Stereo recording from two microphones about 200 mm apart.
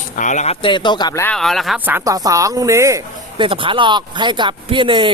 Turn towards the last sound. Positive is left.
turn(degrees=-25)  # may be behind; listen again after turning